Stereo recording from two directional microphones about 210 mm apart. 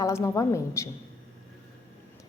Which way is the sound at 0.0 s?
15° left (ahead or behind).